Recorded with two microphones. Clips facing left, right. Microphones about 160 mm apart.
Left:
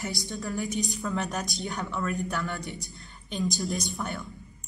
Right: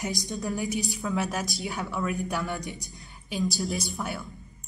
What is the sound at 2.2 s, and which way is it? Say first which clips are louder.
A woman's voice: right 1 dB; 15° right (ahead or behind).